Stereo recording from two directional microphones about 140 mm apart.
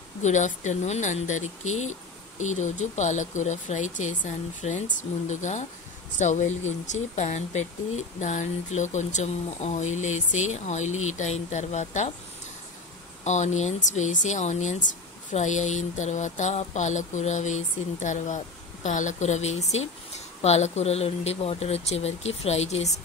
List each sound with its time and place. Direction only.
0.2 s speech: 60° left (ahead or behind)
13.2 s speech: 55° left (ahead or behind)